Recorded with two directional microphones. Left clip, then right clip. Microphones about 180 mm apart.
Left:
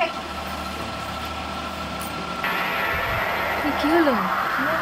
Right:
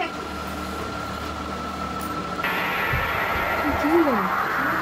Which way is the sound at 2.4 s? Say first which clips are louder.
Left 1 dB; centre (ahead or behind).